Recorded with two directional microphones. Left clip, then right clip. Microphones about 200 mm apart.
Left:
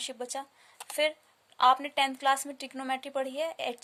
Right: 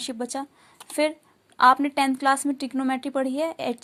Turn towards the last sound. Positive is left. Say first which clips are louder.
# right 6 dB
turn(degrees=-15)  # may be behind; listen again after turning